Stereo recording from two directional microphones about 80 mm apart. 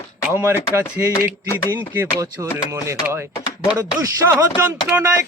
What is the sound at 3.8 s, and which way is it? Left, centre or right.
Music, right.